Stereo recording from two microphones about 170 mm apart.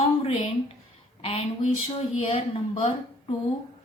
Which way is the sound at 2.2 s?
35° left (ahead or behind).